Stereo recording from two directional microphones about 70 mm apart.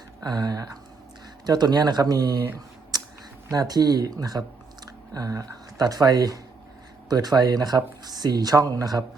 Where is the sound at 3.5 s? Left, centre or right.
Right.